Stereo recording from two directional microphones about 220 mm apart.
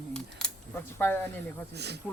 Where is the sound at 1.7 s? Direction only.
50° right (ahead or behind).